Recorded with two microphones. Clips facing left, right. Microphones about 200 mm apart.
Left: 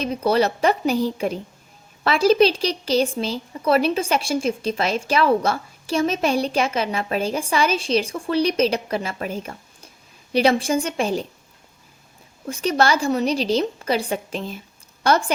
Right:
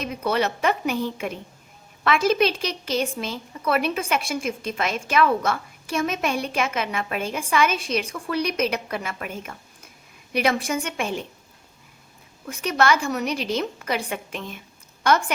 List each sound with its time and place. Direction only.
0.0 s a woman's voice: 35° left (ahead or behind)
12.5 s a woman's voice: 30° left (ahead or behind)